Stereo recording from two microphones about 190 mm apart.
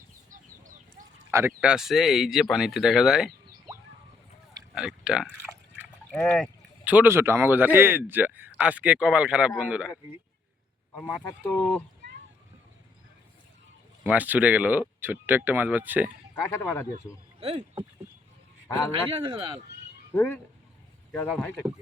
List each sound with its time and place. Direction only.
0.3 s a sound: 45° right (ahead or behind)
1.3 s speech: 10° right (ahead or behind)
4.7 s speech: 5° right (ahead or behind)
6.8 s a man's voice: 10° right (ahead or behind)
10.9 s speech: 10° left (ahead or behind)
14.0 s a man's voice: 5° right (ahead or behind)
16.3 s speech: 10° left (ahead or behind)
17.4 s speech: 30° right (ahead or behind)
19.1 s speech: 25° right (ahead or behind)
20.1 s speech: 10° left (ahead or behind)